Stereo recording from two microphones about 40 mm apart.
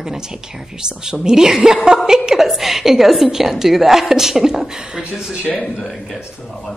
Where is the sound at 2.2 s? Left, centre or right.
Centre.